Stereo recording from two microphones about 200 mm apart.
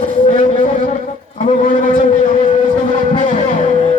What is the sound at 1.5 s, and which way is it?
Speech, 40° left (ahead or behind).